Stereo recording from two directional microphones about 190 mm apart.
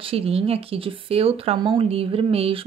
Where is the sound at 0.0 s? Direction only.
30° right (ahead or behind).